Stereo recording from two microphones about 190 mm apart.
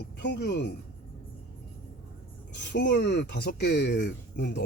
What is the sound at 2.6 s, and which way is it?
Speech, 65° left (ahead or behind).